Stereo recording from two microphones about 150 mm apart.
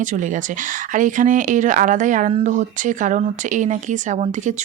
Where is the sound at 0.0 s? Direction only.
60° right (ahead or behind).